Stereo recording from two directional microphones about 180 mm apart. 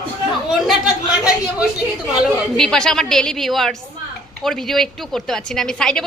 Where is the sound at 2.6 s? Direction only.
5° left (ahead or behind).